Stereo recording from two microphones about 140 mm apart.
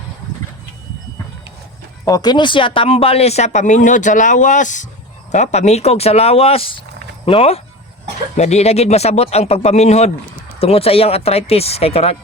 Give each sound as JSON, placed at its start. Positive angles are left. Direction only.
{"t": 2.0, "sound": "speech", "side_deg": 30}